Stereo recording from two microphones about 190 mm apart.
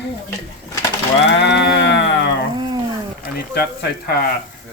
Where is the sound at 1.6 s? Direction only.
70° left (ahead or behind).